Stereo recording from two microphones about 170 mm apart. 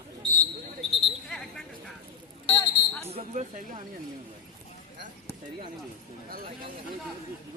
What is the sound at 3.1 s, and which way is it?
Speech, 40° right (ahead or behind).